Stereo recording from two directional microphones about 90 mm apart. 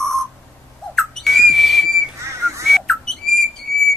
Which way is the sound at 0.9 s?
5° left (ahead or behind).